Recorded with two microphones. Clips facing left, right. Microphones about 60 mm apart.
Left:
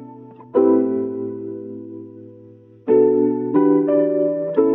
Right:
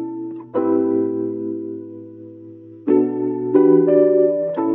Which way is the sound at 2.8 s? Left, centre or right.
Centre.